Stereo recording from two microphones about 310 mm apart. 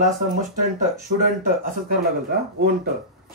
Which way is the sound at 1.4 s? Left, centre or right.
Right.